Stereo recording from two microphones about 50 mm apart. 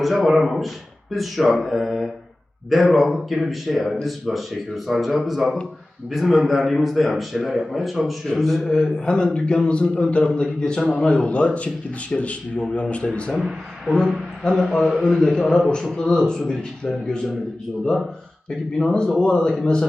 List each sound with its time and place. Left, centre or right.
0.0 s a man's voice: centre
8.6 s a man's voice: centre
13.3 s a man's voice: centre
18.8 s a man's voice: centre